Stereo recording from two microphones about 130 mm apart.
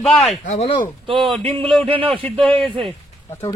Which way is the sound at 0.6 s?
40° left (ahead or behind).